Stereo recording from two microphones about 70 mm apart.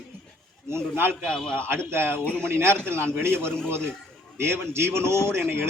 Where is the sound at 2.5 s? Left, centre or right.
Right.